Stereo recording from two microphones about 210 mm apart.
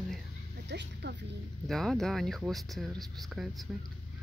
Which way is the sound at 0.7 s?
55° right (ahead or behind).